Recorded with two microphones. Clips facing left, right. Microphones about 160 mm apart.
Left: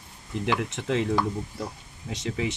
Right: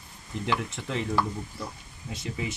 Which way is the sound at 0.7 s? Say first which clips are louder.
Left 6 dB; 75° left (ahead or behind).